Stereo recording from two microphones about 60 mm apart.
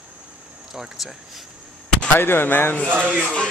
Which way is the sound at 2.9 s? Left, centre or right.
Right.